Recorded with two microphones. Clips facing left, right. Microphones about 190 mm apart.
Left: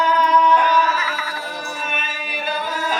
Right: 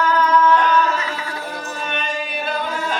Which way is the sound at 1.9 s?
5° left (ahead or behind).